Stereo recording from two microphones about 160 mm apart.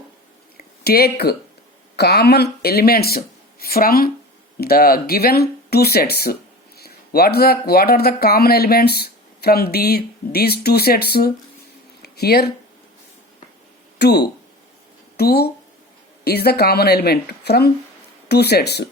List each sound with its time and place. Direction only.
0.5 s a sound: 75° left (ahead or behind)
2.0 s speech: 90° left
14.0 s speech: 90° left